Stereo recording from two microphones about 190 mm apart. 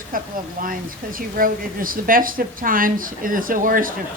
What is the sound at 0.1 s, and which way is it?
Speech, 45° right (ahead or behind).